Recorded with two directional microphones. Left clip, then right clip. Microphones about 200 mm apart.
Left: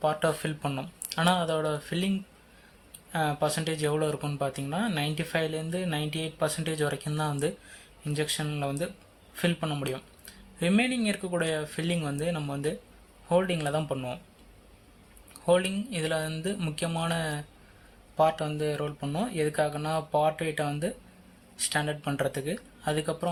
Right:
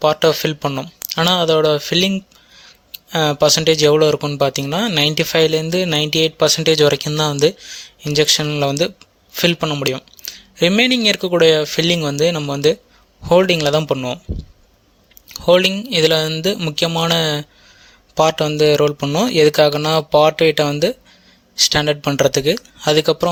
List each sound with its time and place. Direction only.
0.0 s speech: 40° right (ahead or behind)
15.3 s speech: 45° right (ahead or behind)